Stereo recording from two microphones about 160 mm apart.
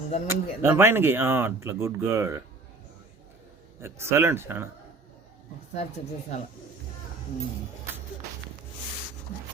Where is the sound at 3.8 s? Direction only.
15° right (ahead or behind).